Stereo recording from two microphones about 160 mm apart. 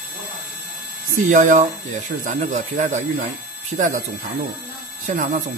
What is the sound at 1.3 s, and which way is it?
Speech, 55° right (ahead or behind).